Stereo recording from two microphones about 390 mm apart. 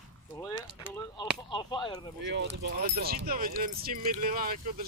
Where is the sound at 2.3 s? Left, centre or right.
Right.